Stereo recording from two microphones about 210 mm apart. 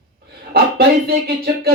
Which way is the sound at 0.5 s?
50° right (ahead or behind).